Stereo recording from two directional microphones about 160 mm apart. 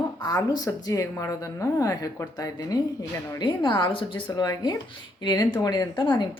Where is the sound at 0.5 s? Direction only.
25° left (ahead or behind).